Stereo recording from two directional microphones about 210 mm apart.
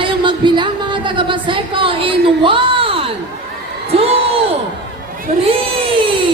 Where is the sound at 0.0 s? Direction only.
25° right (ahead or behind).